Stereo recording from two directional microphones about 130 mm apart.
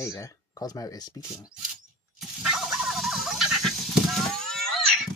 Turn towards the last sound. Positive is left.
turn(degrees=5)  # may be behind; listen again after turning